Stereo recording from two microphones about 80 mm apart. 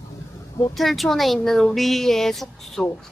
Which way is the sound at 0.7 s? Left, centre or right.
Centre.